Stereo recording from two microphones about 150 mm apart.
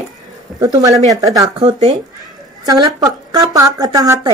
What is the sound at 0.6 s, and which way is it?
Speech, 25° right (ahead or behind).